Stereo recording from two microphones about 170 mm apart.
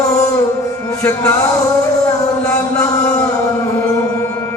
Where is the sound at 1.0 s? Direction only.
15° left (ahead or behind).